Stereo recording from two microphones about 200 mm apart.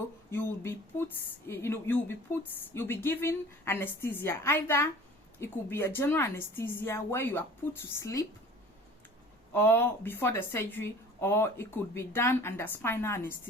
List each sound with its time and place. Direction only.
0.3 s speech: 10° left (ahead or behind)
9.5 s speech: 10° left (ahead or behind)